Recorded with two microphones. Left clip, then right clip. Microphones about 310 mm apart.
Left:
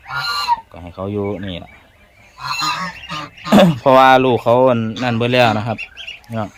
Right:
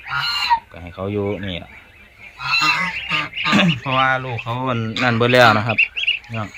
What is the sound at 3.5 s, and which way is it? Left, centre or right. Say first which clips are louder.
Speech: left 9 dB; centre.